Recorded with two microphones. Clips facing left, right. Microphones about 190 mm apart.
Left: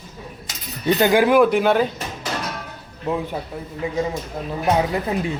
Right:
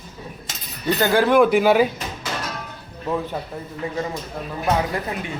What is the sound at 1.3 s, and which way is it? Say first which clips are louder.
Speech: right 1 dB; centre (ahead or behind).